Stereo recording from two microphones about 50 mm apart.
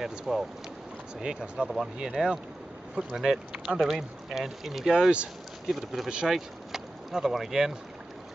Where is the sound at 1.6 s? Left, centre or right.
Centre.